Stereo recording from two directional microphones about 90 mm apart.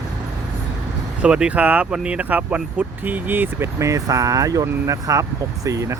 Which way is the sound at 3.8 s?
35° right (ahead or behind).